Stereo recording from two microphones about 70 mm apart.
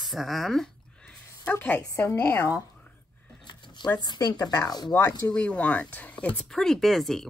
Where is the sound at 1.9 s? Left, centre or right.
Left.